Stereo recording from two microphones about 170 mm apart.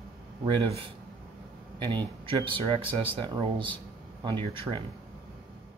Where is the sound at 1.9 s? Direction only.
30° right (ahead or behind).